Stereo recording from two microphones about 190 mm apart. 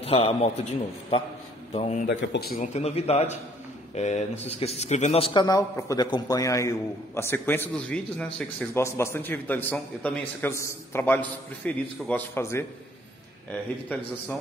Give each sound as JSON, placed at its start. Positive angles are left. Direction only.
{"t": 0.0, "sound": "speech", "side_deg": 30}
{"t": 2.0, "sound": "speech", "side_deg": 60}